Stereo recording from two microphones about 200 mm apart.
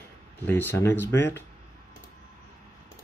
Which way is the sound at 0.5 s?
10° left (ahead or behind).